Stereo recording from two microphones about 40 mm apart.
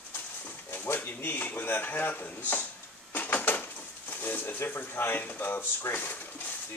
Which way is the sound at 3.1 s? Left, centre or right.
Left.